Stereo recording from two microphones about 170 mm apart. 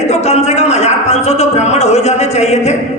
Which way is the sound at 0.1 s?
40° left (ahead or behind).